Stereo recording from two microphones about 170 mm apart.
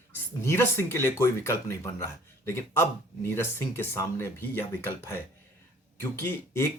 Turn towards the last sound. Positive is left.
turn(degrees=15)  # may be behind; listen again after turning